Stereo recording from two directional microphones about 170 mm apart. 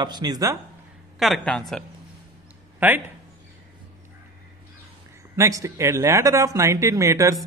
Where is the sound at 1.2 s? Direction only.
Centre (ahead or behind).